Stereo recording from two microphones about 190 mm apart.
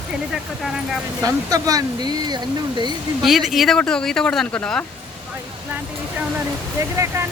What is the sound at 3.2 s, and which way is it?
Speech, centre (ahead or behind).